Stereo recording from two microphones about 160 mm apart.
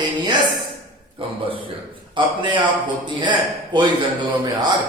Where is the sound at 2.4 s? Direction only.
30° right (ahead or behind).